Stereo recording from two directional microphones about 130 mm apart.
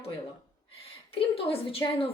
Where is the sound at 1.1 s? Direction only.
45° left (ahead or behind).